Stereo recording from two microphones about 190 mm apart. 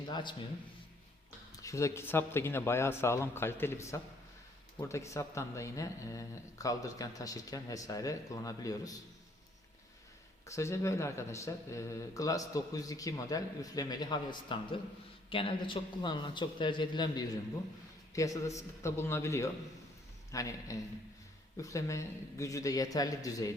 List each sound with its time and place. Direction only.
0.1 s a man's voice: 25° left (ahead or behind)
1.5 s speech: 15° left (ahead or behind)
10.4 s a man's voice: 15° left (ahead or behind)